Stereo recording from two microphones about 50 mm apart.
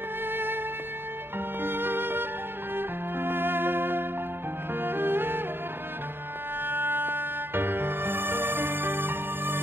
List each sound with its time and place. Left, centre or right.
0.3 s music: right
1.6 s music: right
6.6 s music: right